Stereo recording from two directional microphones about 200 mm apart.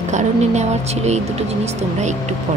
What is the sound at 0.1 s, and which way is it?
Speech, 35° right (ahead or behind).